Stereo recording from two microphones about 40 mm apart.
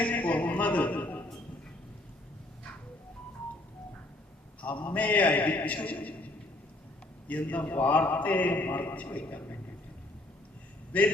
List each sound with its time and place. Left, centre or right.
0.0 s a sound: left
4.6 s a man's voice: left
7.3 s a man's voice: left
10.9 s a man's voice: left